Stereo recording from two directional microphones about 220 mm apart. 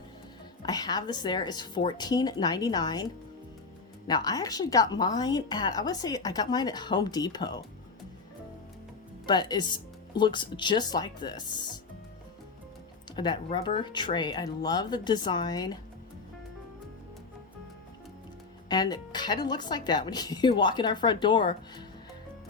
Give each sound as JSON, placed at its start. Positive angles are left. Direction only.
{"t": 0.6, "sound": "a woman's voice", "side_deg": 15}
{"t": 9.2, "sound": "speech", "side_deg": 20}
{"t": 13.1, "sound": "speech", "side_deg": 20}
{"t": 18.7, "sound": "speech", "side_deg": 20}